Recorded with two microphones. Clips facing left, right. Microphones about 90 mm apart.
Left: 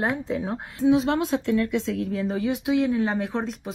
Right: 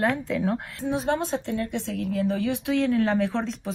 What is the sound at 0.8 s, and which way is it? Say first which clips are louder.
Speech: left 7 dB; 75° left (ahead or behind).